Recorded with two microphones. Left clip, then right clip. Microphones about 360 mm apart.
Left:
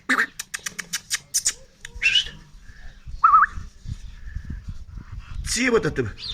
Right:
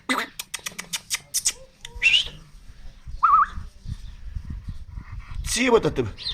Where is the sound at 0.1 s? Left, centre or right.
Centre.